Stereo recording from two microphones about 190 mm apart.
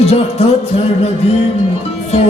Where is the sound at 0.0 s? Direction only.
30° left (ahead or behind).